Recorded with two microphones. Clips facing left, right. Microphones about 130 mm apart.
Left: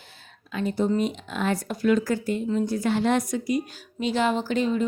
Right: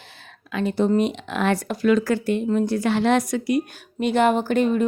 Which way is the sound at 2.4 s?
50° right (ahead or behind).